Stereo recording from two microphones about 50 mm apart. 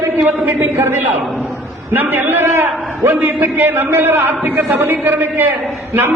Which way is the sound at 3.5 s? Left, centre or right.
Right.